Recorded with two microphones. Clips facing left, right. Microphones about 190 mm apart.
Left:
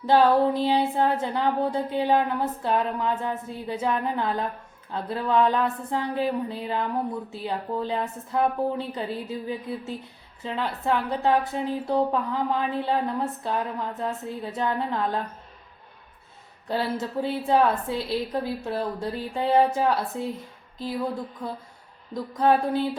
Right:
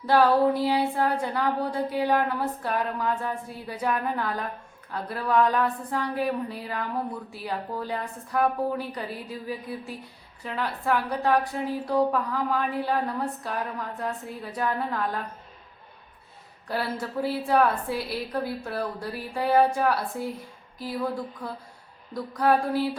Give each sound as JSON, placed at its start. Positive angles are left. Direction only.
{"t": 0.0, "sound": "a woman's voice", "side_deg": 20}
{"t": 16.6, "sound": "a woman's voice", "side_deg": 20}